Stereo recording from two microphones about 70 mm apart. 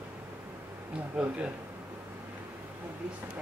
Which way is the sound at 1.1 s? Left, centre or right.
Centre.